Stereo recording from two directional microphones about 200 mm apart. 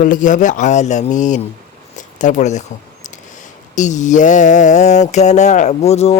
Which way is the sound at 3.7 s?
35° left (ahead or behind).